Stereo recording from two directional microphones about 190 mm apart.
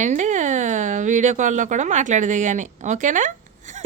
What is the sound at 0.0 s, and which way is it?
Speech, 40° right (ahead or behind).